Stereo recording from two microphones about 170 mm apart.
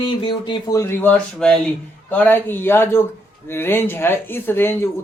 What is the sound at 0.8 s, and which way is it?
Speech, 10° left (ahead or behind).